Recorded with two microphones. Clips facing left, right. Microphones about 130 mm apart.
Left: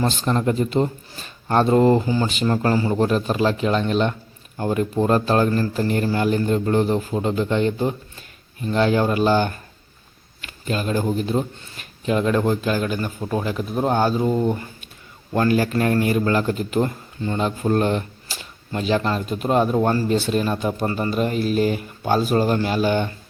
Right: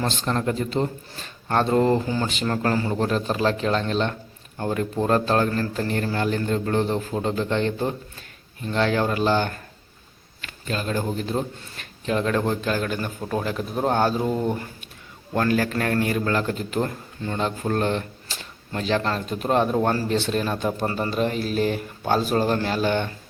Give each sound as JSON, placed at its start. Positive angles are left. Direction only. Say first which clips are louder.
{"t": 0.0, "sound": "a man's voice", "louder": "left 4 dB", "side_deg": 15}
{"t": 2.0, "sound": "a man's voice", "louder": "left 4 dB", "side_deg": 10}
{"t": 10.7, "sound": "a man's voice", "louder": "left 4 dB", "side_deg": 15}